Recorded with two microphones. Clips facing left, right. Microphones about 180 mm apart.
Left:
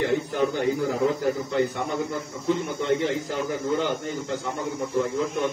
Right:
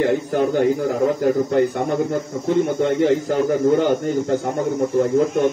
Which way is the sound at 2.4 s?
55° right (ahead or behind).